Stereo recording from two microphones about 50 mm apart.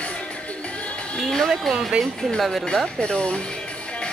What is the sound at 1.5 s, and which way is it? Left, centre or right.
Speech, centre.